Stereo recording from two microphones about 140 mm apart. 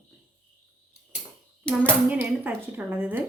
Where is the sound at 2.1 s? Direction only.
10° right (ahead or behind).